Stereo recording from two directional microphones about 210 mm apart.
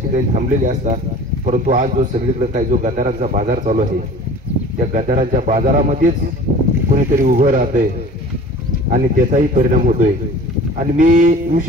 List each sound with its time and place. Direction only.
0.1 s a man's voice: 35° right (ahead or behind)
7.2 s a man's voice: 40° right (ahead or behind)
8.9 s a man's voice: 40° right (ahead or behind)